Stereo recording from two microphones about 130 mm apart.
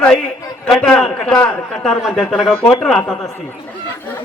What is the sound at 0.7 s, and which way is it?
A man's voice, 5° left (ahead or behind).